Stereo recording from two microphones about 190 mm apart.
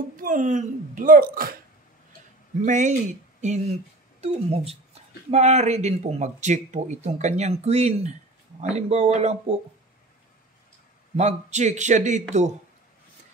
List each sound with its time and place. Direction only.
0.2 s speech: 45° right (ahead or behind)
2.6 s speech: 40° right (ahead or behind)
11.1 s speech: 35° right (ahead or behind)